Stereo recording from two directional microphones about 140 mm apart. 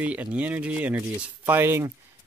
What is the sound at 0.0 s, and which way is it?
Speech, 10° right (ahead or behind).